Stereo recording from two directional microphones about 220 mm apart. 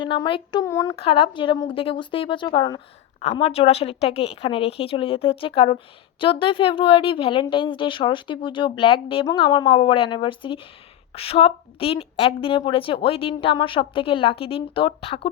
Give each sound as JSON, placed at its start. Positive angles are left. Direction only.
{"t": 0.0, "sound": "speech", "side_deg": 20}
{"t": 0.9, "sound": "a woman's voice", "side_deg": 25}